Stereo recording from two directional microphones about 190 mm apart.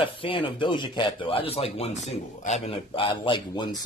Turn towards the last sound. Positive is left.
turn(degrees=25)  # may be behind; listen again after turning